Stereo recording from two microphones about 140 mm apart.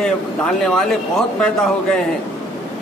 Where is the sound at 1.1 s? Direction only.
5° left (ahead or behind).